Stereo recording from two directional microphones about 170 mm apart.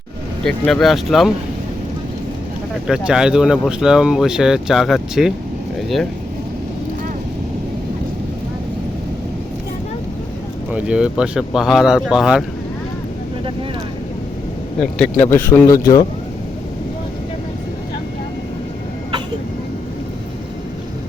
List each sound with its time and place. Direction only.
0.4 s speech: 5° left (ahead or behind)
2.8 s speech: 5° right (ahead or behind)
10.7 s speech: 5° right (ahead or behind)
14.8 s speech: 5° left (ahead or behind); by 16.0 s 20° left (ahead or behind)